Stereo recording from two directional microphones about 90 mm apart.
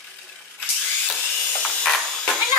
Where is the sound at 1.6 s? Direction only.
5° left (ahead or behind).